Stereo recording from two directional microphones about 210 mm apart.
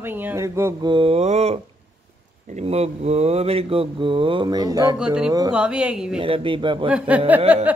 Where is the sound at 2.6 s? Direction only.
30° right (ahead or behind).